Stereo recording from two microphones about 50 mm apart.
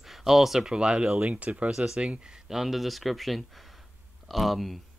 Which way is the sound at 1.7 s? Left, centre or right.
Centre.